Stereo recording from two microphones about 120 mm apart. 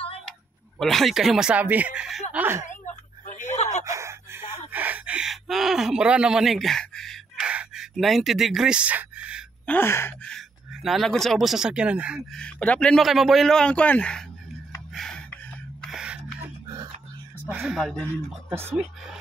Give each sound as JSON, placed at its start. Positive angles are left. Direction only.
{"t": 0.7, "sound": "speech", "side_deg": 0}
{"t": 2.3, "sound": "speech", "side_deg": -20}
{"t": 3.3, "sound": "a sound", "side_deg": 85}
{"t": 3.8, "sound": "a sound", "side_deg": -25}
{"t": 9.7, "sound": "gasp", "side_deg": 20}
{"t": 10.2, "sound": "speech", "side_deg": 0}
{"t": 12.4, "sound": "speech", "side_deg": 10}
{"t": 13.0, "sound": "speech", "side_deg": 0}
{"t": 15.0, "sound": "a sound", "side_deg": 5}
{"t": 15.8, "sound": "gasp", "side_deg": -5}
{"t": 16.6, "sound": "a sound", "side_deg": -35}
{"t": 17.5, "sound": "speech", "side_deg": -5}